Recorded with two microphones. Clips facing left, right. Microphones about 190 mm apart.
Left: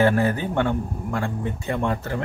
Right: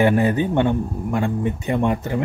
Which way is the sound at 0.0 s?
20° right (ahead or behind).